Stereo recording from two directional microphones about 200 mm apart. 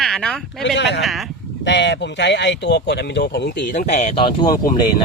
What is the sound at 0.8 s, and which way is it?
Speech, 60° left (ahead or behind).